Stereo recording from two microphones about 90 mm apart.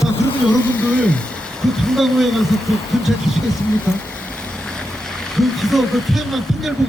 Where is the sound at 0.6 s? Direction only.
20° left (ahead or behind).